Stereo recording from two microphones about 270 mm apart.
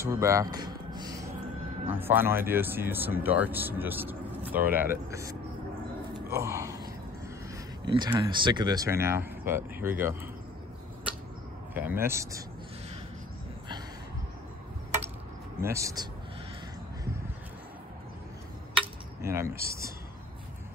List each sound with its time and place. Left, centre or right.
0.0 s a sound: centre
1.9 s speech: centre
6.1 s gasp: centre
7.8 s speech: centre
11.7 s speech: centre
15.6 s speech: centre
19.2 s speech: centre